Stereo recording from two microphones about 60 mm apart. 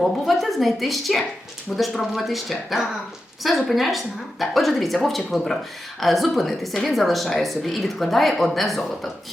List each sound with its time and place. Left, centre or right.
0.0 s speech: centre